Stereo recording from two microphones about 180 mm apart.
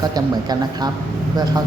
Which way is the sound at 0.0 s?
20° right (ahead or behind).